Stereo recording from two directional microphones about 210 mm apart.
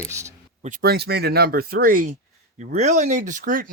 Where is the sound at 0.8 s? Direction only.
50° right (ahead or behind).